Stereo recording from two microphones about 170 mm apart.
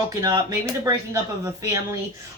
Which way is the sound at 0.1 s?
20° right (ahead or behind).